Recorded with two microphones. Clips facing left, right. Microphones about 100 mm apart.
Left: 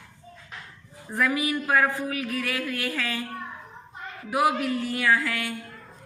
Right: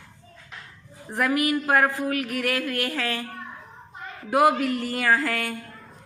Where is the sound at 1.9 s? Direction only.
70° right (ahead or behind).